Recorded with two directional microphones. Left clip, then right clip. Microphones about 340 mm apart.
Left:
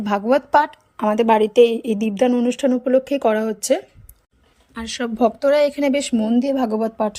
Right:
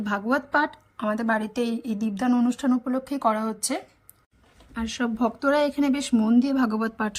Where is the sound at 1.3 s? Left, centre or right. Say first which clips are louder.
Left 16 dB; right.